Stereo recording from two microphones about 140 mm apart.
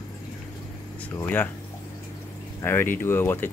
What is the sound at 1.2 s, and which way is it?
Speech, 10° left (ahead or behind).